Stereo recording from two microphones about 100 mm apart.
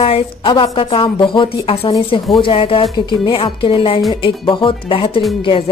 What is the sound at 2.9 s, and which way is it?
Speech, 50° left (ahead or behind).